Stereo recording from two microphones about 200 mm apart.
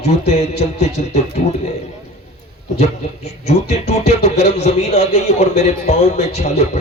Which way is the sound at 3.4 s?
35° left (ahead or behind).